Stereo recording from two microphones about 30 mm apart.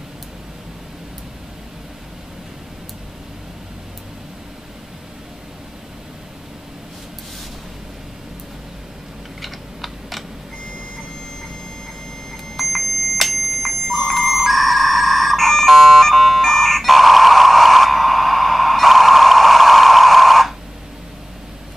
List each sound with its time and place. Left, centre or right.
9.4 s typing: centre
12.5 s alarm clock: centre